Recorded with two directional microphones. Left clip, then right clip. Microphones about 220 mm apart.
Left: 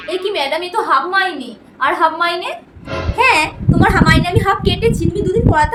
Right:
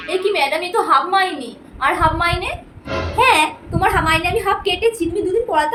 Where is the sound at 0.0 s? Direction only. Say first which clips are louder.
Even; centre (ahead or behind).